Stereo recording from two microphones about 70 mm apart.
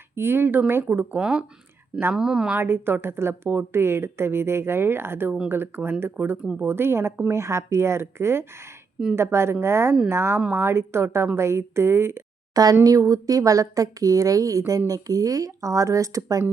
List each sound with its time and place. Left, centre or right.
0.2 s a woman's voice: right
1.1 s speech: centre
2.6 s a woman's voice: right
12.8 s a woman's voice: right